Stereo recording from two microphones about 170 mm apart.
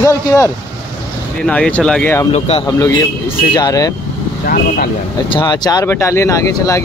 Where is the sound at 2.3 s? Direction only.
35° left (ahead or behind).